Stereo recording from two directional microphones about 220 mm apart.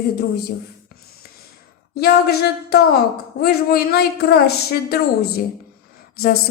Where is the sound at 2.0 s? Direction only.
45° left (ahead or behind).